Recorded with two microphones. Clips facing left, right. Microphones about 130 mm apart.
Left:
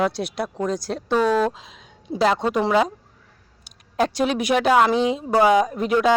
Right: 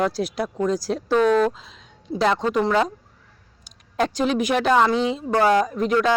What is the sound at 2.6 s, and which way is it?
Speech, 10° left (ahead or behind).